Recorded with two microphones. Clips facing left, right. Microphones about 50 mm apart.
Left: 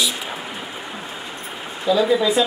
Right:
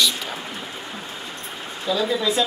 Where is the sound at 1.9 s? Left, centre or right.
Centre.